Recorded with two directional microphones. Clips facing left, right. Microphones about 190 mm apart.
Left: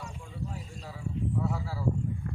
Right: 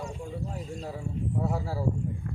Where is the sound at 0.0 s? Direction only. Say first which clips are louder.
Right 5 dB; 45° right (ahead or behind).